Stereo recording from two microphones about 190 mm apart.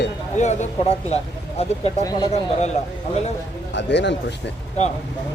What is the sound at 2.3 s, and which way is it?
Speech, 35° left (ahead or behind).